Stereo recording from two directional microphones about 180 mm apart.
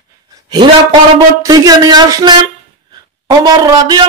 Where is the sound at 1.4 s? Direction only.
20° right (ahead or behind).